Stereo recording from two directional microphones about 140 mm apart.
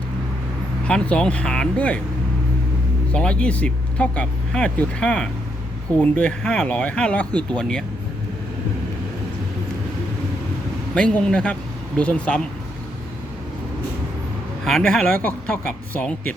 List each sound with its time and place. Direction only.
0.9 s speech: 5° left (ahead or behind)
3.1 s speech: 5° left (ahead or behind)
10.9 s speech: 5° left (ahead or behind)
14.6 s speech: 5° left (ahead or behind)